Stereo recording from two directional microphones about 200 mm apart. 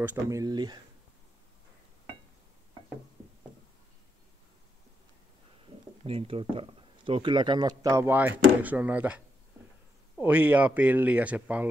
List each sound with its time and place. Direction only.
0.0 s speech: 10° right (ahead or behind)
6.0 s speech: 30° right (ahead or behind); by 9.2 s 10° right (ahead or behind)
10.2 s speech: 5° right (ahead or behind)